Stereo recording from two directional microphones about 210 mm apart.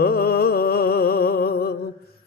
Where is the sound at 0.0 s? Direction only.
50° left (ahead or behind).